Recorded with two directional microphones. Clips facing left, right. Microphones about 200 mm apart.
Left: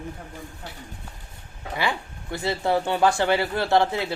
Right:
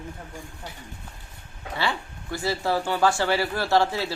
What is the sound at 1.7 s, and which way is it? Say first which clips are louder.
Speech: left 1 dB; 20° left (ahead or behind).